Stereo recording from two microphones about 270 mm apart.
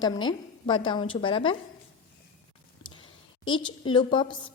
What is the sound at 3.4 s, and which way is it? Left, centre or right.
A woman's voice, centre.